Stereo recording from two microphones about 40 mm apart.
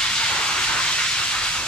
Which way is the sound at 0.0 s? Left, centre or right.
Left.